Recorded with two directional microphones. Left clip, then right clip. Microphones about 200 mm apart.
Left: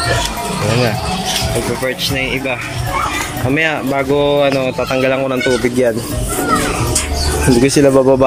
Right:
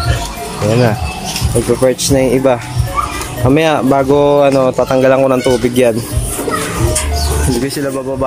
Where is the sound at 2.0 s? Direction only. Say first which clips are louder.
Right 6 dB; 25° right (ahead or behind).